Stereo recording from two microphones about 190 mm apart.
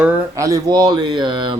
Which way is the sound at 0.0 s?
15° right (ahead or behind).